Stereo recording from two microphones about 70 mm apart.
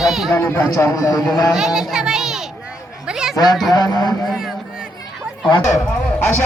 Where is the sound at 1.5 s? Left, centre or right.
Centre.